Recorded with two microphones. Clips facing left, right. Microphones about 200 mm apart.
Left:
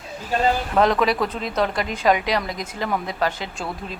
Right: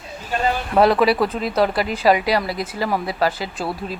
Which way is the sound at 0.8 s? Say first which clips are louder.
Right 5 dB; 10° right (ahead or behind).